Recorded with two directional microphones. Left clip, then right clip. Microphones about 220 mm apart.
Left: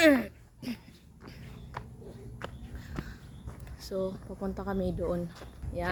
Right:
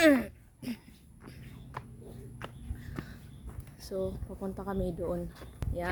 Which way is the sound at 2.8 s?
Centre (ahead or behind).